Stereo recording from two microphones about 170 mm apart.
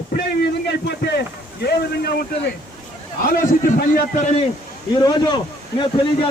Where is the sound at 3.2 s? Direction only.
55° left (ahead or behind).